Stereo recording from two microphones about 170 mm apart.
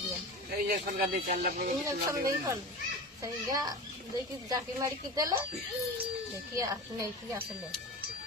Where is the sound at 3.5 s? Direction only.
20° right (ahead or behind).